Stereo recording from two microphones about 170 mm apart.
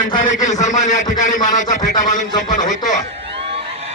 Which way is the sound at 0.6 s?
45° left (ahead or behind).